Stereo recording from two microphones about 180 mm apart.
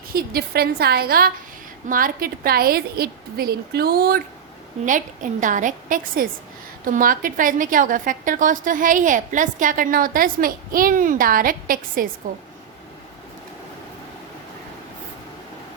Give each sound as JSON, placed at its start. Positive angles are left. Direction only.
{"t": 0.1, "sound": "a woman's voice", "side_deg": -55}
{"t": 4.9, "sound": "a woman's voice", "side_deg": -45}